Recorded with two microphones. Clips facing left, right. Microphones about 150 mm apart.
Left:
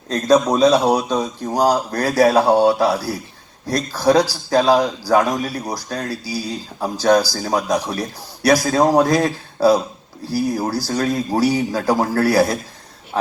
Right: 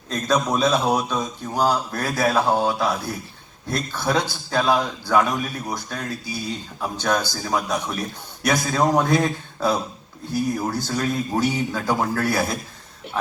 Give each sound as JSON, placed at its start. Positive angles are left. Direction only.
{"t": 0.1, "sound": "a man's voice", "side_deg": 35}
{"t": 2.0, "sound": "speech", "side_deg": 80}
{"t": 2.6, "sound": "a man's voice", "side_deg": 35}